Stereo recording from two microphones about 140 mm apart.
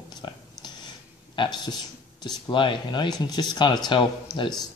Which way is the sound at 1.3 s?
35° left (ahead or behind).